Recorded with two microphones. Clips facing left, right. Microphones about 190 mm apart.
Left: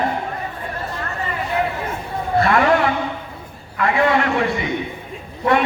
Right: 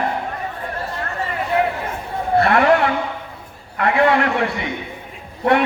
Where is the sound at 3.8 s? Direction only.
60° right (ahead or behind).